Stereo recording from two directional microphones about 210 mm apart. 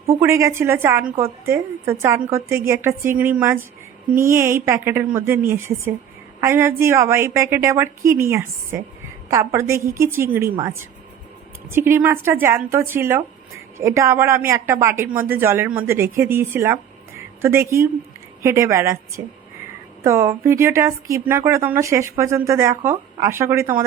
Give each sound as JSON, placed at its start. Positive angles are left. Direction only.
{"t": 0.2, "sound": "a woman's voice", "side_deg": -15}